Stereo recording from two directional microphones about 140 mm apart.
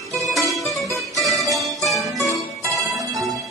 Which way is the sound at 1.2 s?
Centre (ahead or behind).